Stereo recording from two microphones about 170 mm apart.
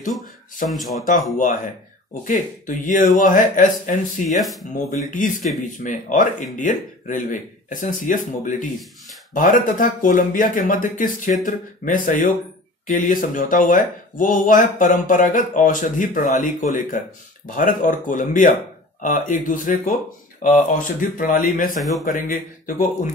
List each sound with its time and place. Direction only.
0.7 s speech: centre (ahead or behind)
1.3 s speech: 50° left (ahead or behind)
4.4 s speech: centre (ahead or behind)
5.1 s speech: 50° left (ahead or behind)